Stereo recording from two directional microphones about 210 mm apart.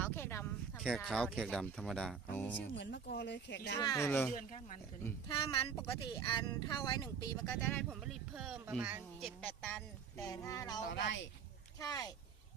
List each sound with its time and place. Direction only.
0.0 s a sound: 10° left (ahead or behind)
0.8 s speech: centre (ahead or behind)
2.3 s child singing: 10° left (ahead or behind)
2.7 s speech: 55° left (ahead or behind)
3.8 s child singing: 15° left (ahead or behind)
4.4 s speech: 40° left (ahead or behind)
5.3 s speech: 25° left (ahead or behind)
7.9 s speech: centre (ahead or behind)
10.2 s child singing: 15° left (ahead or behind)
10.8 s speech: 55° left (ahead or behind)
11.8 s child singing: 15° left (ahead or behind)